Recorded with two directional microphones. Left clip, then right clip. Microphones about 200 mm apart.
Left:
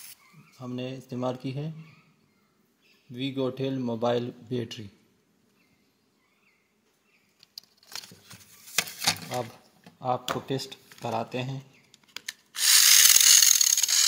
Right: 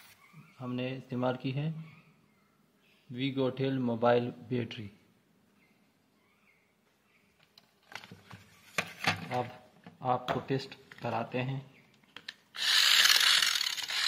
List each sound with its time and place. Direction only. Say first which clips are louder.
0.6 s speech: left 1 dB; 20° left (ahead or behind)
3.1 s speech: left 2 dB; 20° left (ahead or behind)
9.0 s a sound: even; 5° left (ahead or behind)
9.9 s speech: left 2 dB; 30° left (ahead or behind)
12.5 s a sound: left 5 dB; 5° left (ahead or behind)
13.4 s mechanisms: left 7 dB; centre (ahead or behind)